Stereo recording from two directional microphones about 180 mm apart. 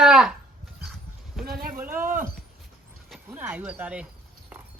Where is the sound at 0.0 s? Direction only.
Centre (ahead or behind).